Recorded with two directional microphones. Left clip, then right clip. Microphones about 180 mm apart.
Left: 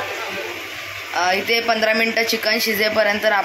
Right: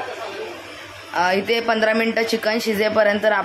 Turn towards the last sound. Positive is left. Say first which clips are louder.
# even
turn(degrees=-20)  # may be behind; listen again after turning